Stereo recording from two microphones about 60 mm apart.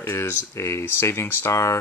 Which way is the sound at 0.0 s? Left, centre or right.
Left.